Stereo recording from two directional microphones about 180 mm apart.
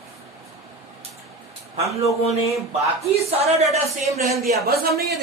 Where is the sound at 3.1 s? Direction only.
35° right (ahead or behind).